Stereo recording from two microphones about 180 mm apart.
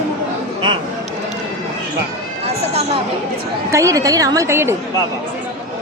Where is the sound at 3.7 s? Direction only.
15° right (ahead or behind).